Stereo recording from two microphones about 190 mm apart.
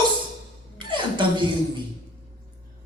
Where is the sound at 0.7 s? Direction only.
25° right (ahead or behind).